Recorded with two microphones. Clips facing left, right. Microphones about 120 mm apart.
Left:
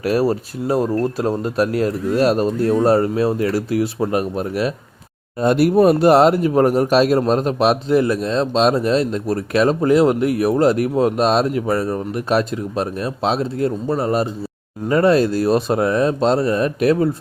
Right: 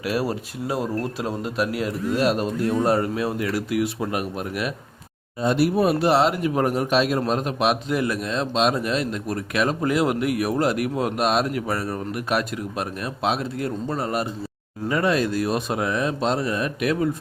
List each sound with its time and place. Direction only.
0.0 s a man's voice: 40° left (ahead or behind)
5.4 s a man's voice: 55° left (ahead or behind); by 17.2 s 35° left (ahead or behind)